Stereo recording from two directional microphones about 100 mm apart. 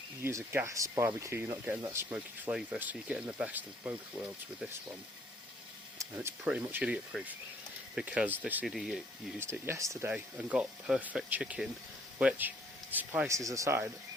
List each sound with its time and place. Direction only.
0.2 s speech: 25° right (ahead or behind)
6.1 s speech: 20° right (ahead or behind)
8.6 s speech: centre (ahead or behind)
9.4 s speech: 25° right (ahead or behind)
10.1 s speech: 10° right (ahead or behind)
13.2 s speech: 30° right (ahead or behind)